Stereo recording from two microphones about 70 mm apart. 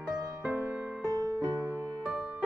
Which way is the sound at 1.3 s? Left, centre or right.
Right.